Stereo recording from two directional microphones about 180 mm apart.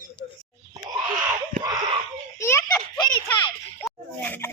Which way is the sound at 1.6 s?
20° right (ahead or behind).